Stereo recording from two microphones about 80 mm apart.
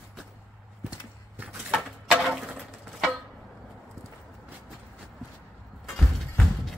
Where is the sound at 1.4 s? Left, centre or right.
Centre.